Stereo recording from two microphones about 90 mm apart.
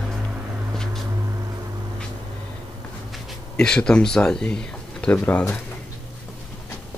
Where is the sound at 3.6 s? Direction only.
10° left (ahead or behind).